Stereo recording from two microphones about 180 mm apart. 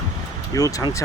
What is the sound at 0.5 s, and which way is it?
Speech, 20° left (ahead or behind).